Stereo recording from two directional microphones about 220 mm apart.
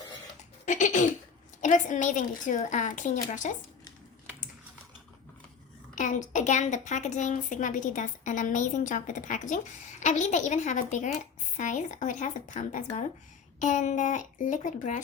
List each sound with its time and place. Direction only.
0.6 s a woman's voice: 35° left (ahead or behind)
5.9 s a woman's voice: 35° left (ahead or behind)